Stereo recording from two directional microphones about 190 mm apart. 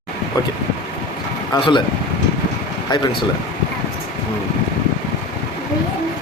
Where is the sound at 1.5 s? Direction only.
25° left (ahead or behind).